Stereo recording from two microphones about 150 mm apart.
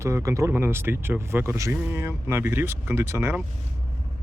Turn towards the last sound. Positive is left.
turn(degrees=-15)  # may be behind; listen again after turning